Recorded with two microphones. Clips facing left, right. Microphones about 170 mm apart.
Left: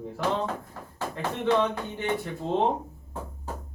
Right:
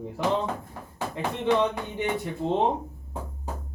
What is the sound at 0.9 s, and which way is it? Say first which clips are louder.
Speech: right 1 dB; 15° right (ahead or behind).